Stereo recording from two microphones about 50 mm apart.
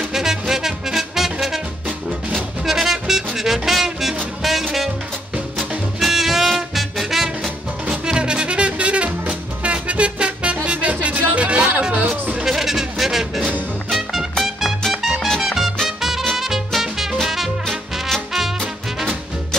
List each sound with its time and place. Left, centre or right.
0.1 s music: centre
2.6 s music: centre
7.9 s music: centre
12.4 s a sound: centre
13.8 s music: centre
15.4 s music: centre